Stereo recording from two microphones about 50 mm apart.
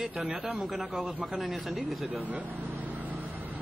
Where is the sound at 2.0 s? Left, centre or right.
Right.